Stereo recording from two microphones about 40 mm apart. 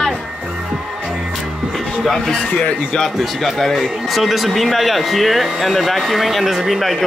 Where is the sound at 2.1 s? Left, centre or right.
Centre.